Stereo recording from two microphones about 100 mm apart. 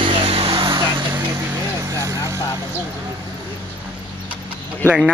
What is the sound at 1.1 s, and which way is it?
Vehicle, 30° right (ahead or behind).